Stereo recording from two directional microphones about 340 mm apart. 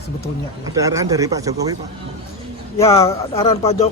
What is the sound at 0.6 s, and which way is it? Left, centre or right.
Speech, centre.